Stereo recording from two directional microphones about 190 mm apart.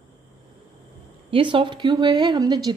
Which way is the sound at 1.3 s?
25° right (ahead or behind).